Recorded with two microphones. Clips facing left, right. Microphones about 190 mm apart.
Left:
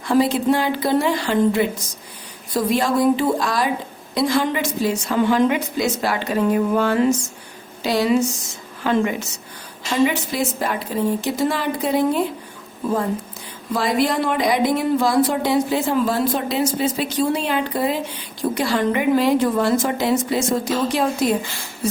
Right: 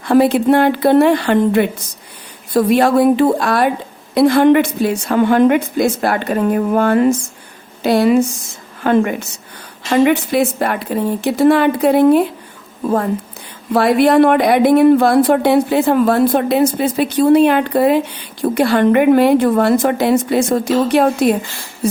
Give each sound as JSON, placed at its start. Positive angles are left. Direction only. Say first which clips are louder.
{"t": 0.0, "sound": "speech", "louder": "right 6 dB", "side_deg": -60}
{"t": 13.7, "sound": "speech", "louder": "right 9 dB", "side_deg": -60}